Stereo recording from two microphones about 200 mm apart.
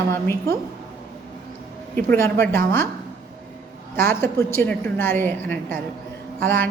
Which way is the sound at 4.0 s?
10° left (ahead or behind).